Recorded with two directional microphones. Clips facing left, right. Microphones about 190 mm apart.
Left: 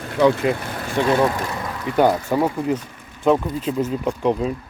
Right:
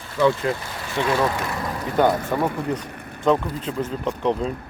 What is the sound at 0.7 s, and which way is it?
Vehicle, 50° left (ahead or behind).